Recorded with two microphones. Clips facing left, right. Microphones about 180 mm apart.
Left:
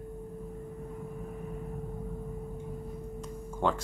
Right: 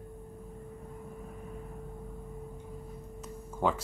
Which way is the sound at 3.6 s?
5° right (ahead or behind).